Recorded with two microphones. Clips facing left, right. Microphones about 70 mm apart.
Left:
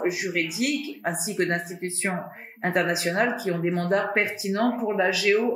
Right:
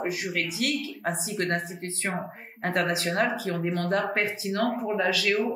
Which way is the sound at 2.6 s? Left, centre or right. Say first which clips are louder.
Left 2 dB; centre.